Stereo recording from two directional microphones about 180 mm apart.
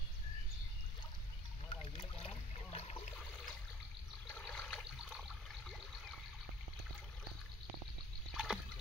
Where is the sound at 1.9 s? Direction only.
30° left (ahead or behind).